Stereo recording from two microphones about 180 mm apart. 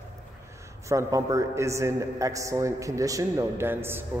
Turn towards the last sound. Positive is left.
turn(degrees=-10)  # may be behind; listen again after turning